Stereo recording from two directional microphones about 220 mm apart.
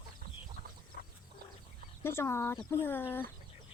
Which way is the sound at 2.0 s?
10° left (ahead or behind).